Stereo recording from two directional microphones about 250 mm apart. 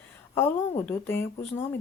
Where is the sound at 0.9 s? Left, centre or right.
Centre.